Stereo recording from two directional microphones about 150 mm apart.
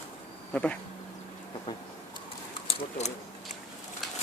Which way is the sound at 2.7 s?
45° left (ahead or behind).